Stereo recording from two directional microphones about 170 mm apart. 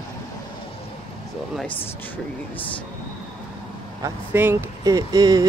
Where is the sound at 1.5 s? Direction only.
10° left (ahead or behind).